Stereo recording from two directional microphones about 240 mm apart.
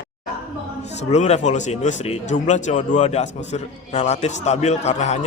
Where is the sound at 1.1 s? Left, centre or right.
Left.